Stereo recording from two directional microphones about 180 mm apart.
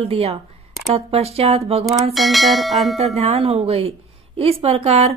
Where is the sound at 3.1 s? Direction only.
35° right (ahead or behind).